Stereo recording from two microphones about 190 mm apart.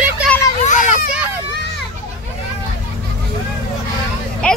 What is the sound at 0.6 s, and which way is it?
Children playing, 40° left (ahead or behind).